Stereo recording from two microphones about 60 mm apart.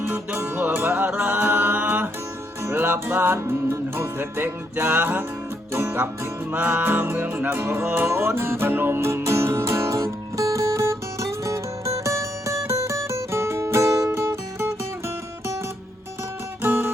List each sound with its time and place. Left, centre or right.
0.0 s music: right
0.3 s music: right
0.8 s music: right
5.7 s music: right
6.5 s music: right
10.0 s music: right
14.1 s music: right
16.6 s music: right